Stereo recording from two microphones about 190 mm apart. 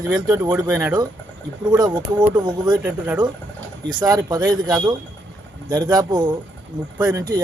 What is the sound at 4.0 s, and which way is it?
Speech, 20° right (ahead or behind).